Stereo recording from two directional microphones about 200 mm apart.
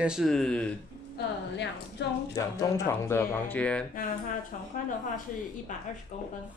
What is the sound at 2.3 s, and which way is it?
Speech, 15° left (ahead or behind).